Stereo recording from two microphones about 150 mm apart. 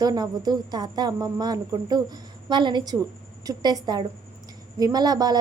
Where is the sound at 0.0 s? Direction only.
25° right (ahead or behind).